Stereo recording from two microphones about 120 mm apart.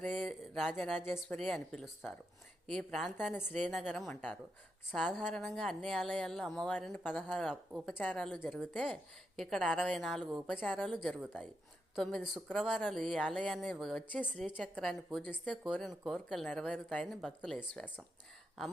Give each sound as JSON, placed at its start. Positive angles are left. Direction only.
{"t": 0.1, "sound": "a woman's voice", "side_deg": 0}
{"t": 4.1, "sound": "speech", "side_deg": 15}
{"t": 4.9, "sound": "a woman's voice", "side_deg": 0}
{"t": 7.3, "sound": "a woman's voice", "side_deg": 0}
{"t": 7.9, "sound": "a woman's voice", "side_deg": 10}
{"t": 10.5, "sound": "a woman's voice", "side_deg": 10}
{"t": 15.6, "sound": "a woman's voice", "side_deg": 0}